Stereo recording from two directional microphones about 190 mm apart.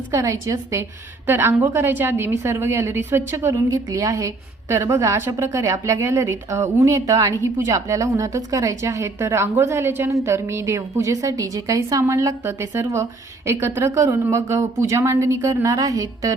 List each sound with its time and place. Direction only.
0.1 s a woman's voice: 15° right (ahead or behind)